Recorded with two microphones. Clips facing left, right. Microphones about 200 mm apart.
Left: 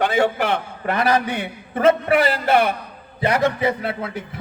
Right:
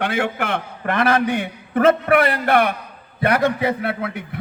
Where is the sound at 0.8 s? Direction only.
50° right (ahead or behind).